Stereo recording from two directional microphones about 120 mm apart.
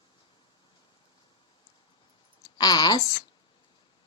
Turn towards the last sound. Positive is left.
turn(degrees=35)  # may be behind; listen again after turning